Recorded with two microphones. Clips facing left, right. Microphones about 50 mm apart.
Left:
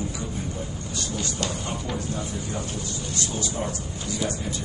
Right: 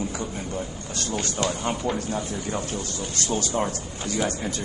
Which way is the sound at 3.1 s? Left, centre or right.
Right.